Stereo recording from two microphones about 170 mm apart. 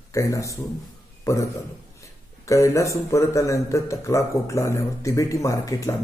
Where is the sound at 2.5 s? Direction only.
20° left (ahead or behind).